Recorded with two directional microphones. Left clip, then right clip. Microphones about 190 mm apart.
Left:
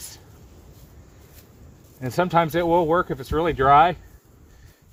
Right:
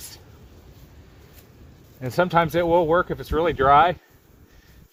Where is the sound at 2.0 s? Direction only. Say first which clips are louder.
Even; 25° left (ahead or behind).